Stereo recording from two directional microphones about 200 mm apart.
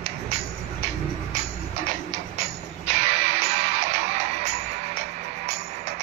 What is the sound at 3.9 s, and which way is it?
Music, 35° right (ahead or behind).